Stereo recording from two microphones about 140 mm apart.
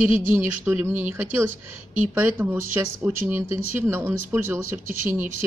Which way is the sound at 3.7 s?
15° right (ahead or behind).